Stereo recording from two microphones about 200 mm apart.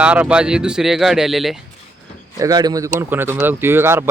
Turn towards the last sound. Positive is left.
turn(degrees=-10)  # may be behind; listen again after turning